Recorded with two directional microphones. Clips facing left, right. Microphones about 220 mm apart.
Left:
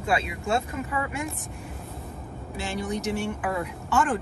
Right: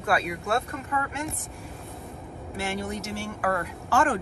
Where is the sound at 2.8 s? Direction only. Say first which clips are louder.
Left 4 dB; 15° left (ahead or behind).